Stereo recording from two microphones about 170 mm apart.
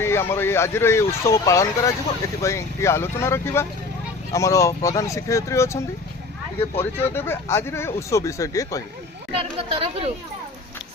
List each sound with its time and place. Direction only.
0.0 s speech: 15° left (ahead or behind)
9.4 s speech: 35° right (ahead or behind)